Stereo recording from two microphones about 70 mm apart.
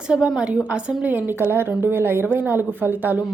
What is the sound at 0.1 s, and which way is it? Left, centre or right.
A woman's voice, centre.